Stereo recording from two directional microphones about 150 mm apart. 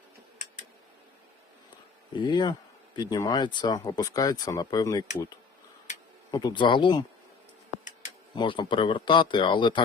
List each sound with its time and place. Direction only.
2.1 s speech: 30° left (ahead or behind)
6.3 s speech: 30° left (ahead or behind)
8.4 s speech: 35° left (ahead or behind)